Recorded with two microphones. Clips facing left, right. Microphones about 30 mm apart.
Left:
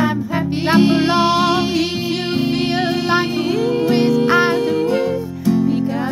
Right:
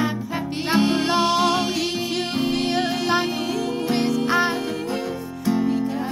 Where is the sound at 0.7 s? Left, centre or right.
Centre.